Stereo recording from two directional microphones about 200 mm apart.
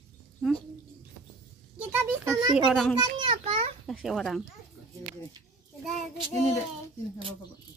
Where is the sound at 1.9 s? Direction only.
10° right (ahead or behind).